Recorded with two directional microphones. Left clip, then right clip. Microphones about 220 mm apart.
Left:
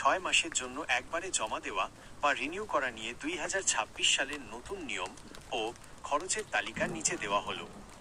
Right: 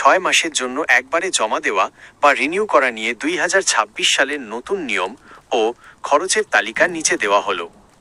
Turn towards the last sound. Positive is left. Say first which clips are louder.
# right 16 dB
turn(degrees=-40)  # may be behind; listen again after turning